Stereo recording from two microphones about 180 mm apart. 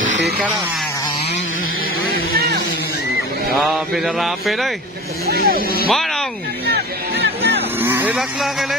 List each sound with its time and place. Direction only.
0.0 s a sound: 90° right
2.3 s a sound: 65° right (ahead or behind)
3.5 s mantra: centre (ahead or behind)
5.2 s speech: 55° right (ahead or behind)
5.9 s speech: centre (ahead or behind)
6.7 s music: 70° right (ahead or behind)
7.8 s speech: 10° right (ahead or behind)